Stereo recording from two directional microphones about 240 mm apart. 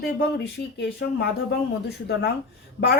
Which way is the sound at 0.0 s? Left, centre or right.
Left.